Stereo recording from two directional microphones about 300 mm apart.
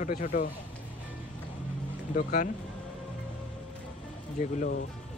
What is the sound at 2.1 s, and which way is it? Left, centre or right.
Speech, left.